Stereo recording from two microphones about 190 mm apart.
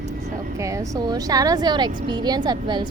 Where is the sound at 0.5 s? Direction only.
15° right (ahead or behind).